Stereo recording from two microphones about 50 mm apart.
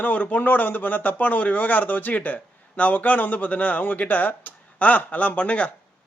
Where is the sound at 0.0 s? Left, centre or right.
Left.